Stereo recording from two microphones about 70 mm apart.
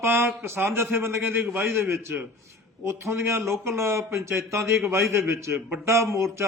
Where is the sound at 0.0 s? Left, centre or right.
Right.